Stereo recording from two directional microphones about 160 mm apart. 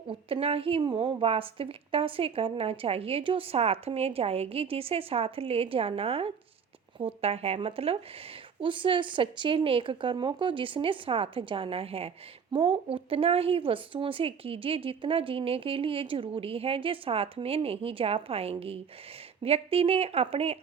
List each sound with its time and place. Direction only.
0.1 s speech: 35° right (ahead or behind)